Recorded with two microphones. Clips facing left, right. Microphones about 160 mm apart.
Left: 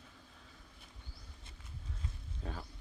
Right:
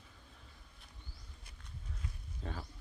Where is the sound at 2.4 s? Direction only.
Centre (ahead or behind).